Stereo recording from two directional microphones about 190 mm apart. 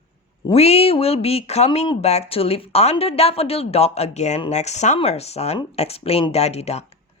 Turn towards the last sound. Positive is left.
turn(degrees=35)  # may be behind; listen again after turning